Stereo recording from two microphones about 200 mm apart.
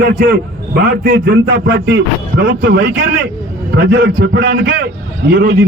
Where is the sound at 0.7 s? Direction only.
45° right (ahead or behind).